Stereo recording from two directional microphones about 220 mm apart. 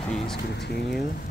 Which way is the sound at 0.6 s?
50° left (ahead or behind).